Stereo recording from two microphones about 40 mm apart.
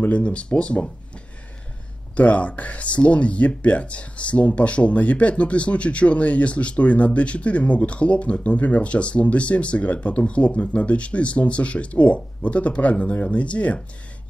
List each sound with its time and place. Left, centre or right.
0.2 s speech: left
2.1 s speech: left